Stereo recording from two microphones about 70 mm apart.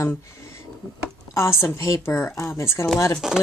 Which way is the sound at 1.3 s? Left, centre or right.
Left.